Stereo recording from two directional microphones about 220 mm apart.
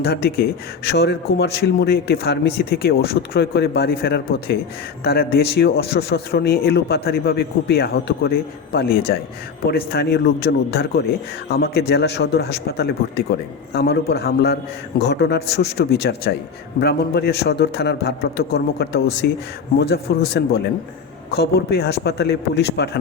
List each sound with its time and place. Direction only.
0.0 s a man's voice: 45° left (ahead or behind)